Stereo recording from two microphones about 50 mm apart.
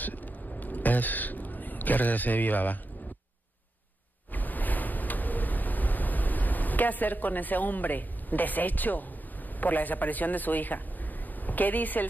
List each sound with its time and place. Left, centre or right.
0.0 s throat clearing: left
4.3 s a sound: left
9.6 s a man's voice: left